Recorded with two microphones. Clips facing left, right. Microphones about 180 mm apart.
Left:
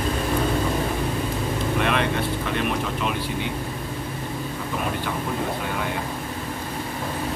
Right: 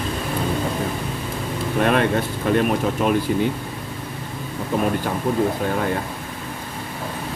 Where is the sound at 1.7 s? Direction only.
45° right (ahead or behind).